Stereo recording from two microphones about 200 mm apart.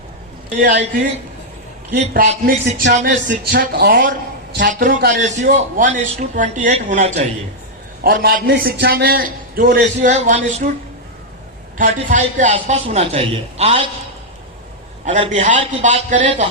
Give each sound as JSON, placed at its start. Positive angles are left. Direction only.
{"t": 0.6, "sound": "a man's voice", "side_deg": -40}
{"t": 1.9, "sound": "a man's voice", "side_deg": -60}
{"t": 2.3, "sound": "a man's voice", "side_deg": -35}
{"t": 3.2, "sound": "a man's voice", "side_deg": -50}
{"t": 8.0, "sound": "a man's voice", "side_deg": -50}
{"t": 11.8, "sound": "a man's voice", "side_deg": -40}
{"t": 15.0, "sound": "a man's voice", "side_deg": -35}